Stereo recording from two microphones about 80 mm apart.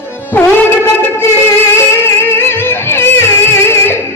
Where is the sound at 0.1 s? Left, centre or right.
Left.